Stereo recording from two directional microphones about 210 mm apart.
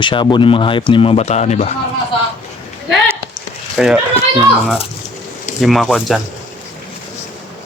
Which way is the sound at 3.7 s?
5° right (ahead or behind).